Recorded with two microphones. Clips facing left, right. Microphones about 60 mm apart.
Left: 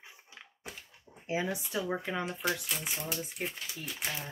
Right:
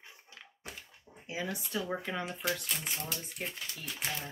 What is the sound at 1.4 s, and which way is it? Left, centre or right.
Speech, centre.